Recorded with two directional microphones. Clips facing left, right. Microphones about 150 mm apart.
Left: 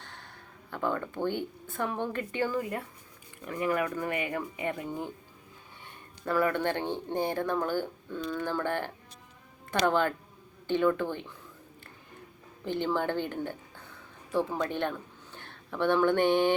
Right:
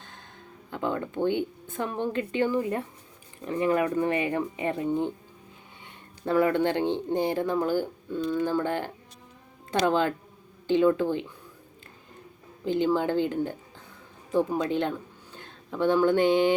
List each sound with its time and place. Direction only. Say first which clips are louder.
0.0 s a sound: even; 20° right (ahead or behind)
0.7 s speech: right 2 dB; 20° right (ahead or behind)
6.2 s speech: right 4 dB; 20° right (ahead or behind)
12.6 s speech: right 5 dB; 15° right (ahead or behind)